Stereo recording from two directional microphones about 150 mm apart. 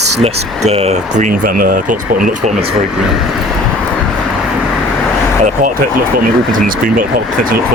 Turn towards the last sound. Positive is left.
turn(degrees=-75)  # may be behind; listen again after turning